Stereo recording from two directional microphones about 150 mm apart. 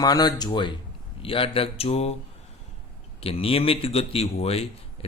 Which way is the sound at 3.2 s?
40° left (ahead or behind).